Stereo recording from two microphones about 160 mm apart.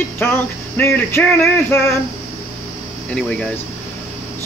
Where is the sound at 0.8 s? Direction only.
15° left (ahead or behind).